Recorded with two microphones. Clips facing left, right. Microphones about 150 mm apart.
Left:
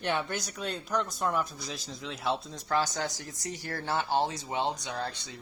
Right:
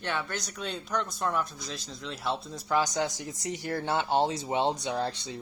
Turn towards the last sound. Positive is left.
turn(degrees=-25)  # may be behind; listen again after turning